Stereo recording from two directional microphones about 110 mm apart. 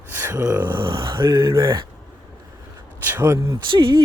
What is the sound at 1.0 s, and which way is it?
Music, 45° right (ahead or behind).